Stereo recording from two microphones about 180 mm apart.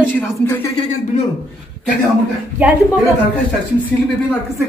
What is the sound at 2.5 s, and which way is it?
Speech, 10° right (ahead or behind).